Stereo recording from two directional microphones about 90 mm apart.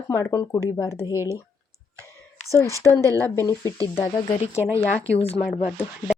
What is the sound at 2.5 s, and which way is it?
Speech, 30° left (ahead or behind).